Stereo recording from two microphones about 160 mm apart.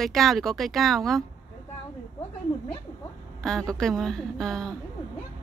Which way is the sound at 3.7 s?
5° left (ahead or behind).